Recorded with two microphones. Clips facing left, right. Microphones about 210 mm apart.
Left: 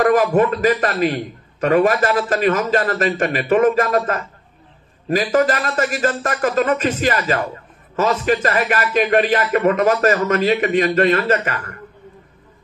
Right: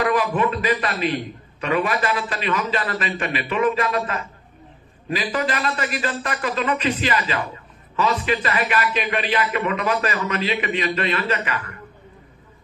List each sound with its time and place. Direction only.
0.0 s a man's voice: 45° left (ahead or behind)